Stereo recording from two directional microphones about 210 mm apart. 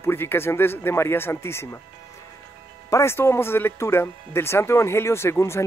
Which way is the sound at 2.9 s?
15° left (ahead or behind).